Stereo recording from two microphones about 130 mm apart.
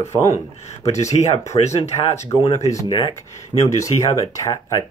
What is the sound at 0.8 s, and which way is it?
Speech, 60° left (ahead or behind).